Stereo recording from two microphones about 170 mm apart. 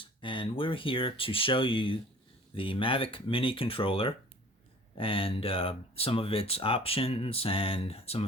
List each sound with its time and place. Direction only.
0.0 s speech: 30° left (ahead or behind)